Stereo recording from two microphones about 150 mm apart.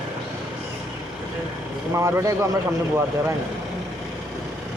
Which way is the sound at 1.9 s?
20° right (ahead or behind).